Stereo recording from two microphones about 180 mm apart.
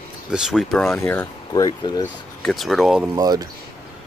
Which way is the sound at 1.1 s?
15° left (ahead or behind).